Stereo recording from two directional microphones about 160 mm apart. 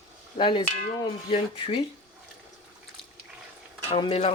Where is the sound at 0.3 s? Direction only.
30° left (ahead or behind).